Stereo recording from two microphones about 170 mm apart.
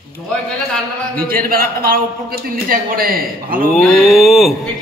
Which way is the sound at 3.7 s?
5° left (ahead or behind).